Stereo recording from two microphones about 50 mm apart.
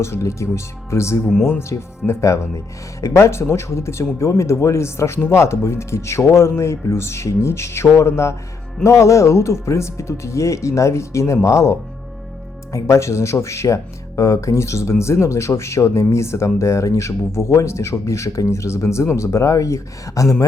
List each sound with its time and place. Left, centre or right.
0.0 s speech: left
1.7 s speech: left
8.8 s speech: left
14.2 s speech: left